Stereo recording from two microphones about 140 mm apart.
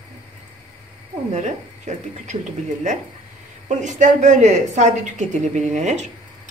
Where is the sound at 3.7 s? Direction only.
60° right (ahead or behind).